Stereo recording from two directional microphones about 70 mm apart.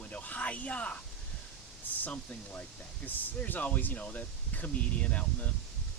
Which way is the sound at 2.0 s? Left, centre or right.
Left.